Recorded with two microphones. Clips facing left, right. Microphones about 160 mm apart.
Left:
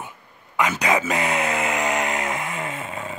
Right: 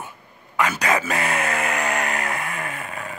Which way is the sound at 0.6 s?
15° left (ahead or behind).